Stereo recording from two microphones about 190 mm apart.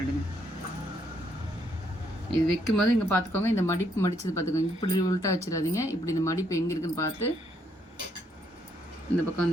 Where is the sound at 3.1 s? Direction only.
10° left (ahead or behind).